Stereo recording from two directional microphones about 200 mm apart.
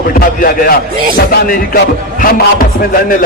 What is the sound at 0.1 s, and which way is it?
Music, 45° left (ahead or behind).